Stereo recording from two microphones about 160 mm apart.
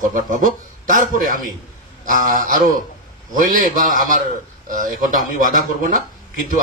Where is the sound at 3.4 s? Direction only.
60° right (ahead or behind).